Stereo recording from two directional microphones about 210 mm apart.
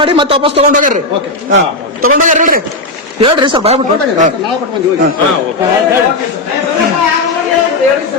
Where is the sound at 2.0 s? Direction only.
35° right (ahead or behind).